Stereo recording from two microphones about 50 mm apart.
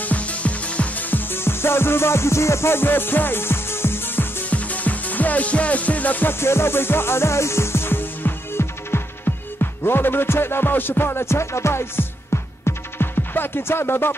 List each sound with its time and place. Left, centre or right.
0.0 s music: left
1.1 s music: left
4.5 s music: left
6.4 s music: left